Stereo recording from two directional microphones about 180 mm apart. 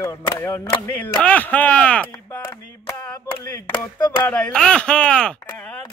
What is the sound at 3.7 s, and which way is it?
Speech, 20° left (ahead or behind).